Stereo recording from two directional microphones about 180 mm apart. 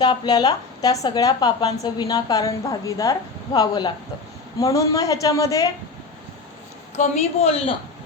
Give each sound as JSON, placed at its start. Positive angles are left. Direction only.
{"t": 0.0, "sound": "speech", "side_deg": 25}
{"t": 7.0, "sound": "speech", "side_deg": 35}